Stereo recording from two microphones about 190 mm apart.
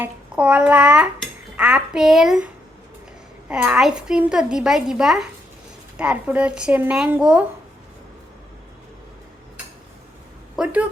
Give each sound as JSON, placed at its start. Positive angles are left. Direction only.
{"t": 0.0, "sound": "speech", "side_deg": -5}
{"t": 3.5, "sound": "a child's voice", "side_deg": -5}
{"t": 10.6, "sound": "speech", "side_deg": -5}